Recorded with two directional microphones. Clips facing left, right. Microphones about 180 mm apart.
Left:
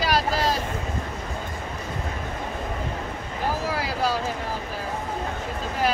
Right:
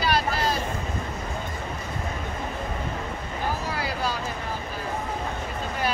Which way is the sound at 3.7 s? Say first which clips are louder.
Left 3 dB; 90° left.